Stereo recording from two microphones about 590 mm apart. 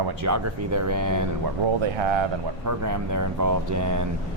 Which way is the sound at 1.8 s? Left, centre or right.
Right.